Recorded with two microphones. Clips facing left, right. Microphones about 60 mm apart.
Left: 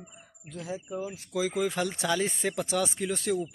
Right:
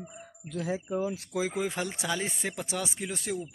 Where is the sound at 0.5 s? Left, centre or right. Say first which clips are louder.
Right 4 dB; right.